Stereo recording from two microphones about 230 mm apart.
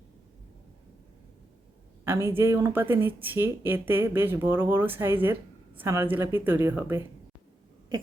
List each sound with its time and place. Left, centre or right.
2.0 s speech: centre